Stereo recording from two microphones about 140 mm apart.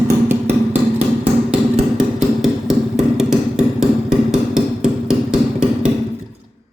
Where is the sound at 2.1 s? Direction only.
Centre (ahead or behind).